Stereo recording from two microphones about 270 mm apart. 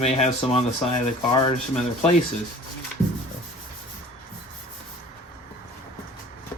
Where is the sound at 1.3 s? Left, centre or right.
Centre.